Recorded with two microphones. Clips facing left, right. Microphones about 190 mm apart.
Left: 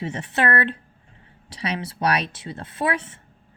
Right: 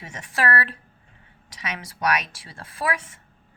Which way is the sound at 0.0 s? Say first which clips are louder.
Left 3 dB; 30° left (ahead or behind).